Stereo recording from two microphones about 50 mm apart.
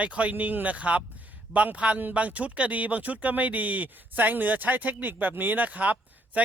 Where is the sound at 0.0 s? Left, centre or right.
Right.